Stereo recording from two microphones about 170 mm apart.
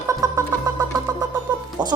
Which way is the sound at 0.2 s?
20° right (ahead or behind).